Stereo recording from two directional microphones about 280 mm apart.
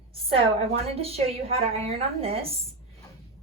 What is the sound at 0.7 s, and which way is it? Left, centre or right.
A woman's voice, right.